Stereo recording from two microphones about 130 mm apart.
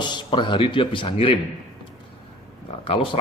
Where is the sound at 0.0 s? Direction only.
35° left (ahead or behind).